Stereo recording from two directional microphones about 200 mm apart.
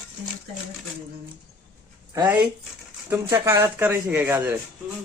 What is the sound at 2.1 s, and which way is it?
A man's voice, 10° right (ahead or behind).